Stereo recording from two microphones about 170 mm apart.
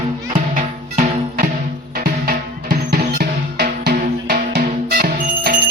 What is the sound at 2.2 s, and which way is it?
Music, 65° right (ahead or behind).